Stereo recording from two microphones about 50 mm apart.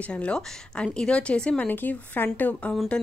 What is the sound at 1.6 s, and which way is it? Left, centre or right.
Speech, left.